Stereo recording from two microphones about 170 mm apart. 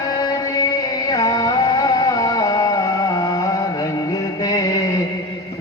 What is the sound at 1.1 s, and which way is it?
Music, 20° left (ahead or behind).